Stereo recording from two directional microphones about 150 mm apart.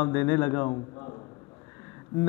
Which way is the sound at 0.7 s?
30° left (ahead or behind).